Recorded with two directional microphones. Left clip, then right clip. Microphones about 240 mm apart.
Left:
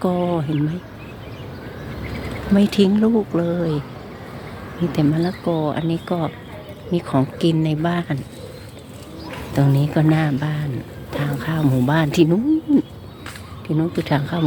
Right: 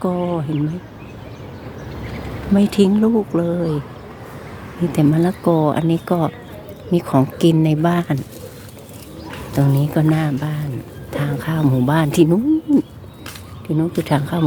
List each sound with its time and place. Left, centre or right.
0.0 s speech: centre
2.6 s speech: centre
4.9 s speech: centre
9.6 s speech: centre